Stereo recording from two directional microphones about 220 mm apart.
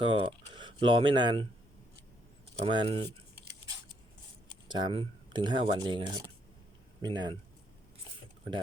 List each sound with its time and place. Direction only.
0.0 s speech: 25° right (ahead or behind)
2.6 s speech: 25° right (ahead or behind)
4.7 s speech: 20° right (ahead or behind)